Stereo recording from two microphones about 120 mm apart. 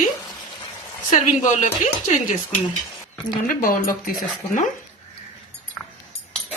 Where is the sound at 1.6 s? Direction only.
90° left.